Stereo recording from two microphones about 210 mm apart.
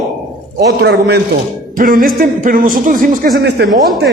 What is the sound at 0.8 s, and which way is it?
Speech, 50° right (ahead or behind).